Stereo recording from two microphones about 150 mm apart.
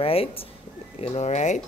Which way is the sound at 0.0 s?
40° left (ahead or behind).